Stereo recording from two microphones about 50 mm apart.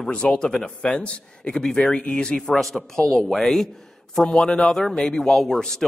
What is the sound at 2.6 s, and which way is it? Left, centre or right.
A man's voice, centre.